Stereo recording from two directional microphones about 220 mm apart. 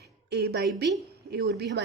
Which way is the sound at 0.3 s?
50° right (ahead or behind).